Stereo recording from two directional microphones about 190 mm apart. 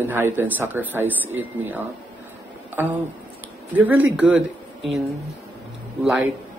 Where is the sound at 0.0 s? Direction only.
10° right (ahead or behind).